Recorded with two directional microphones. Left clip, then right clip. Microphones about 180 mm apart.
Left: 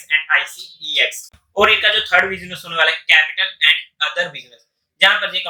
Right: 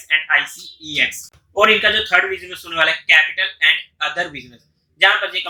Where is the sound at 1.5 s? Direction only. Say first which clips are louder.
Even; 15° left (ahead or behind).